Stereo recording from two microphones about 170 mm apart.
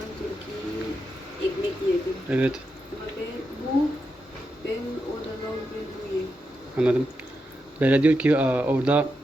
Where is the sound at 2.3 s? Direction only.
10° right (ahead or behind).